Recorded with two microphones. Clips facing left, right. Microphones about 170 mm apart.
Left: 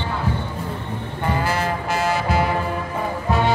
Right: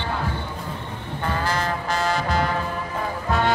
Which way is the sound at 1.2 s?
10° left (ahead or behind).